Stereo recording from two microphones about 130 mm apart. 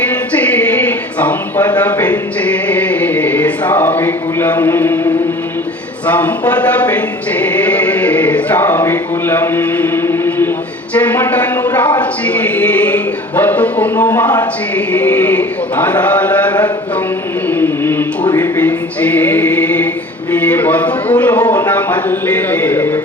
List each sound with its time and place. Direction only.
0.1 s music: 10° left (ahead or behind)
6.1 s a sound: 10° left (ahead or behind)
10.9 s a man's voice: 10° left (ahead or behind)
17.5 s music: 15° left (ahead or behind)
18.3 s a man's voice: 15° left (ahead or behind)